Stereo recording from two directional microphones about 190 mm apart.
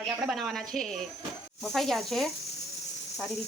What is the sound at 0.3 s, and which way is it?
Speech, centre (ahead or behind).